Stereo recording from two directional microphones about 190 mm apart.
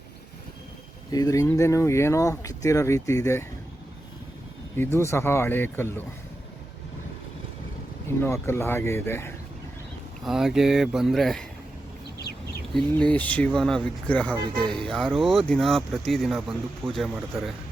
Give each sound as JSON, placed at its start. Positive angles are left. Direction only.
{"t": 1.1, "sound": "speech", "side_deg": 20}
{"t": 4.8, "sound": "speech", "side_deg": 15}
{"t": 8.0, "sound": "speech", "side_deg": 15}
{"t": 10.2, "sound": "speech", "side_deg": 0}
{"t": 12.7, "sound": "speech", "side_deg": 5}